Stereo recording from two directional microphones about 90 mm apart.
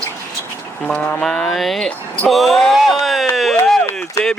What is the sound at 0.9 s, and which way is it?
Speech, 10° left (ahead or behind).